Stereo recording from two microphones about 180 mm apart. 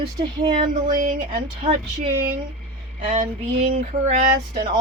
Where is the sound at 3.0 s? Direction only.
35° right (ahead or behind).